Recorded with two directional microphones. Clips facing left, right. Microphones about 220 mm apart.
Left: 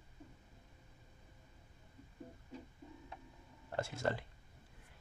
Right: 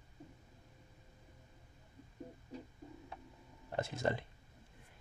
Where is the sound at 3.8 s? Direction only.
20° right (ahead or behind).